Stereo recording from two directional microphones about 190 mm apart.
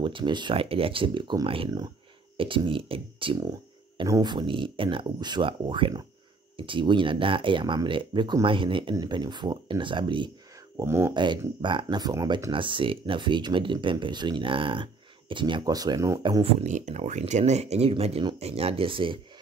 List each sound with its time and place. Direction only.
0.0 s speech: 25° right (ahead or behind)
10.8 s speech: 15° right (ahead or behind)
16.6 s speech: 40° right (ahead or behind)